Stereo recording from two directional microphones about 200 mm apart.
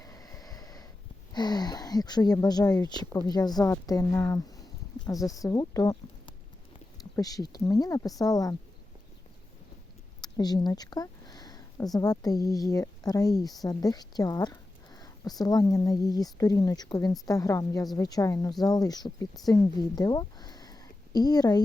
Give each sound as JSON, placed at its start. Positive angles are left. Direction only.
{"t": 0.0, "sound": "snort", "side_deg": 15}
{"t": 1.3, "sound": "speech", "side_deg": 20}
{"t": 10.2, "sound": "a woman's voice", "side_deg": 20}